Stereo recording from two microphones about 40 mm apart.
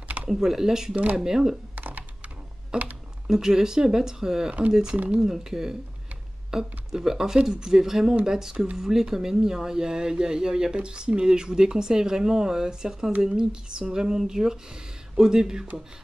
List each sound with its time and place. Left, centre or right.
0.3 s speech: centre
1.8 s computer keyboard: right
2.7 s speech: right